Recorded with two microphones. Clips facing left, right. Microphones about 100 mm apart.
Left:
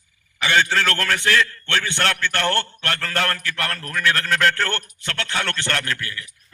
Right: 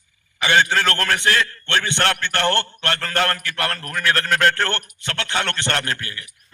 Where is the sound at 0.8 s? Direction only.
35° right (ahead or behind).